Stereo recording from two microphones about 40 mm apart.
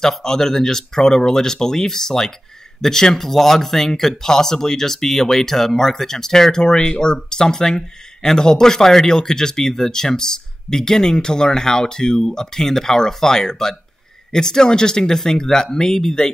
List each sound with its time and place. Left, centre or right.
0.2 s speech: centre